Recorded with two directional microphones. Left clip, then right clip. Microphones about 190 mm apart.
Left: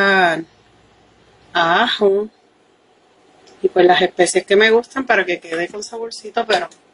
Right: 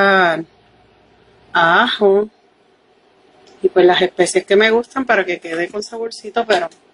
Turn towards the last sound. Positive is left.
turn(degrees=-25)  # may be behind; listen again after turning